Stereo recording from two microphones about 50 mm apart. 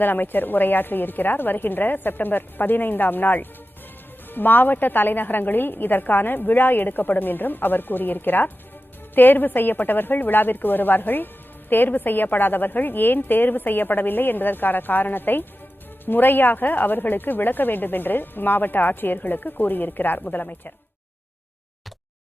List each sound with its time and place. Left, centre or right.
0.0 s a woman's voice: left